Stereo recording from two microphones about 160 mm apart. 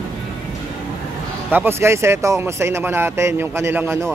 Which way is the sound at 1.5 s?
15° right (ahead or behind).